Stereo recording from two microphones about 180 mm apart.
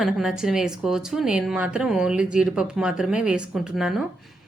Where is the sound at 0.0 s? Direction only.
Centre (ahead or behind).